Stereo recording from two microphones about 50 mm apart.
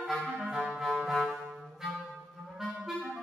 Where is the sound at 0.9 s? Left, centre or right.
Centre.